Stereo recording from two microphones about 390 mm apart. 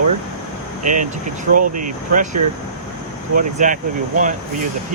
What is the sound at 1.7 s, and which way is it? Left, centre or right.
Speech, centre.